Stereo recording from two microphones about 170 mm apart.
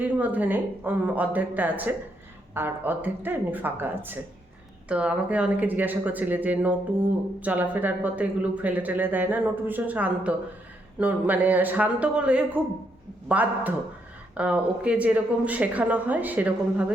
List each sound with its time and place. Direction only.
0.0 s speech: 10° right (ahead or behind)